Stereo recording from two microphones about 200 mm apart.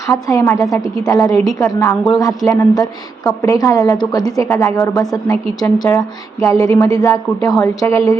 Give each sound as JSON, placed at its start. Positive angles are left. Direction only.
{"t": 0.1, "sound": "a woman's voice", "side_deg": 15}